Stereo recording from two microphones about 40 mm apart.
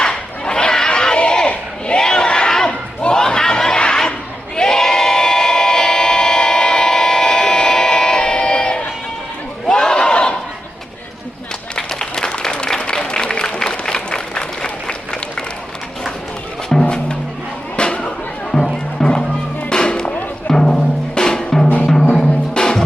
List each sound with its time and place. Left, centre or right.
0.0 s crowd: centre
4.5 s a sound: centre
9.6 s a sound: centre
11.7 s applause: centre
16.8 s music: left
17.7 s a sound: left
18.9 s music: centre
20.5 s drum: centre
22.1 s music: centre